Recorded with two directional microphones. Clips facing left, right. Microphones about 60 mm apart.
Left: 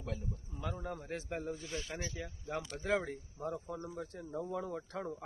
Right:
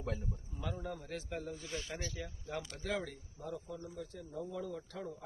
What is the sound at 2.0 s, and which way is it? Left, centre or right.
Speech, centre.